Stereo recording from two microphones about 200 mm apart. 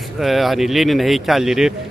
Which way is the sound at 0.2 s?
Centre (ahead or behind).